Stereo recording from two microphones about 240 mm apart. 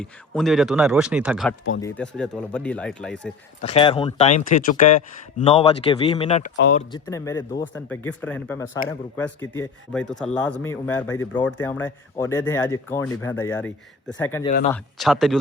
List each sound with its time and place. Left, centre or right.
0.0 s speech: centre
1.8 s speech: centre
3.6 s speech: left
6.9 s speech: centre